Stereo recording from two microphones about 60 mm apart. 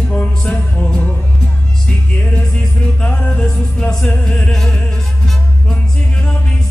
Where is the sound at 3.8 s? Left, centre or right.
Centre.